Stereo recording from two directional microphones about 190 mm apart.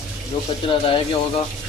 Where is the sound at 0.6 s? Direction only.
25° left (ahead or behind).